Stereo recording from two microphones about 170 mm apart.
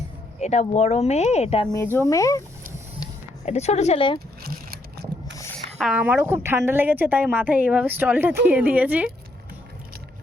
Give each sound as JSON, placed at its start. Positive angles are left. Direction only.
{"t": 0.3, "sound": "speech", "side_deg": 40}
{"t": 1.7, "sound": "speech", "side_deg": 15}
{"t": 3.4, "sound": "speech", "side_deg": 40}
{"t": 4.4, "sound": "a sound", "side_deg": -60}
{"t": 5.8, "sound": "a woman's voice", "side_deg": -10}